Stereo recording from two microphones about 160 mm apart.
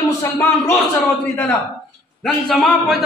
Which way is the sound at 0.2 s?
15° left (ahead or behind).